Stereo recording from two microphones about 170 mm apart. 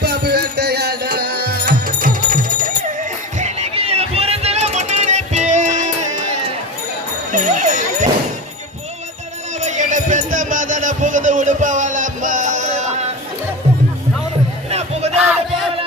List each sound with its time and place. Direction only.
0.0 s music: 70° right (ahead or behind); by 2.7 s 55° right (ahead or behind)
3.3 s a sound: 40° right (ahead or behind)
7.3 s jingle bell: 45° right (ahead or behind)
9.6 s music: 45° right (ahead or behind)
14.7 s music: 40° right (ahead or behind)